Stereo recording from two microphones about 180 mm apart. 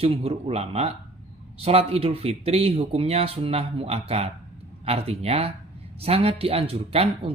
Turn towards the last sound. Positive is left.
turn(degrees=-30)  # may be behind; listen again after turning